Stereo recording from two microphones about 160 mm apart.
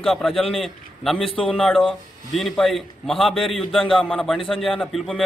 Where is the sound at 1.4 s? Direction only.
5° left (ahead or behind).